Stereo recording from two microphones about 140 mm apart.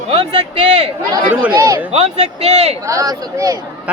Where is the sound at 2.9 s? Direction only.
25° right (ahead or behind).